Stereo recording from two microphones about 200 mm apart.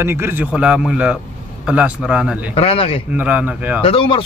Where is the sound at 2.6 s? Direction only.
30° left (ahead or behind).